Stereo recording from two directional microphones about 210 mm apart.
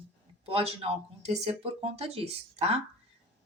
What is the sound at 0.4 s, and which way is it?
Speech, 30° right (ahead or behind).